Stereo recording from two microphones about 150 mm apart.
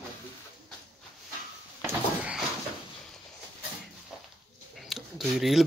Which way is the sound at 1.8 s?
10° right (ahead or behind).